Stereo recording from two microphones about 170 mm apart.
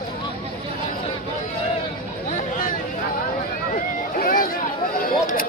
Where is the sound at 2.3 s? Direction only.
50° left (ahead or behind).